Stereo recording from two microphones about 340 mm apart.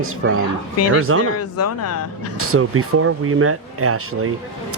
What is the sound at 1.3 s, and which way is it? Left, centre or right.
Speech, left.